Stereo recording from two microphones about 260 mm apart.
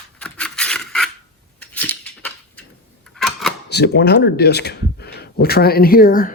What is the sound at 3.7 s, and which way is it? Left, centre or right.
Speech, left.